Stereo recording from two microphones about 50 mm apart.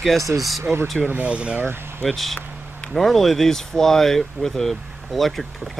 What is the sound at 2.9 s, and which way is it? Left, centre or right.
Speech, centre.